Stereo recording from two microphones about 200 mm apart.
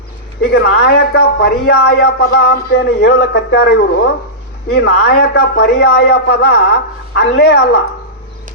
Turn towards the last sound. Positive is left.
turn(degrees=55)  # may be behind; listen again after turning